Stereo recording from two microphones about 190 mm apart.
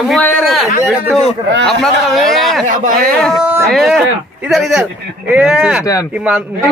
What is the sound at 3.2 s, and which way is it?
Speech, centre (ahead or behind).